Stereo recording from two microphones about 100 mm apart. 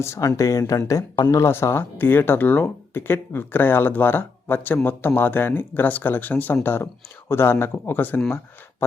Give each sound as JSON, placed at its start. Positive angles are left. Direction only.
{"t": 0.0, "sound": "speech", "side_deg": 30}